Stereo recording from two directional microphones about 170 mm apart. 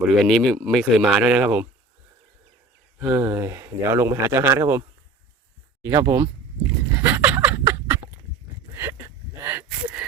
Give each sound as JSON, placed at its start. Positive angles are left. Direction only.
{"t": 0.0, "sound": "speech", "side_deg": 0}
{"t": 3.0, "sound": "speech", "side_deg": -10}
{"t": 5.8, "sound": "speech", "side_deg": -15}
{"t": 7.0, "sound": "a sound", "side_deg": -10}